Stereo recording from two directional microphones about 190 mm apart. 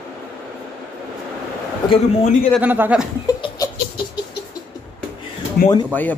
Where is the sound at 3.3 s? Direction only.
20° left (ahead or behind).